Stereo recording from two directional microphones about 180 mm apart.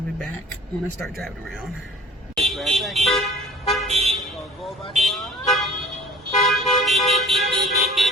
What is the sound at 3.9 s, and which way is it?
Vehicle, 35° right (ahead or behind).